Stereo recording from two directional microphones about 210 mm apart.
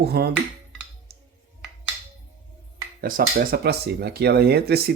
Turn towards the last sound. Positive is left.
turn(degrees=-50)  # may be behind; listen again after turning